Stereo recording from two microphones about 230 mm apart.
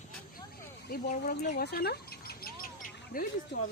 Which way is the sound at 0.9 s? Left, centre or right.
Left.